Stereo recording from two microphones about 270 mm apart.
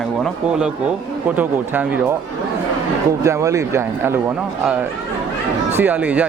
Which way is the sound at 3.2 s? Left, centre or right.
Centre.